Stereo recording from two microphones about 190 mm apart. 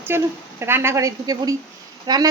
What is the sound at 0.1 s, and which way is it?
A woman's voice, 10° right (ahead or behind).